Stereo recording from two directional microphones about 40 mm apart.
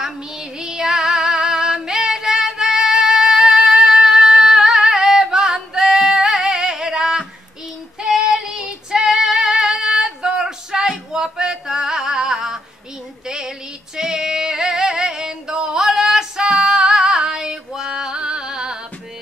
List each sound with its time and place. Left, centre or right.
0.0 s female singing: centre
5.9 s music: centre
8.0 s female singing: centre
13.3 s music: centre